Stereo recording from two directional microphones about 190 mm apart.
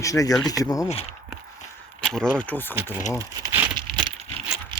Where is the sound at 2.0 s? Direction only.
5° left (ahead or behind).